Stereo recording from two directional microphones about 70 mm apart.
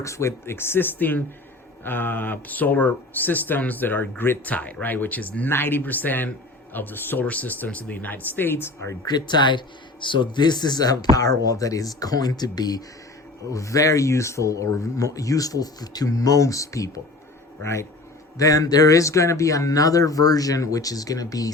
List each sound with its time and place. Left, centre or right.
0.0 s speech: left
9.0 s speech: left
13.5 s speech: left
18.3 s speech: left